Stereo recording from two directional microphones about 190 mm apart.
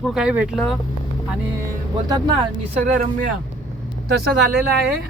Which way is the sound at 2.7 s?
40° right (ahead or behind).